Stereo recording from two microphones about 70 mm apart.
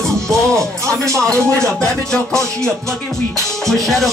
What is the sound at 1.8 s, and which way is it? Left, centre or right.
Music, centre.